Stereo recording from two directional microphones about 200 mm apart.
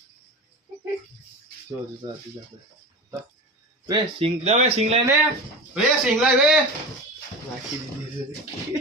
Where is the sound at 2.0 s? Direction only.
25° right (ahead or behind).